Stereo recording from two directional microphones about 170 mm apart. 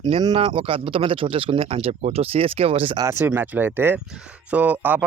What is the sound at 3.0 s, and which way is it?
Speech, 15° right (ahead or behind).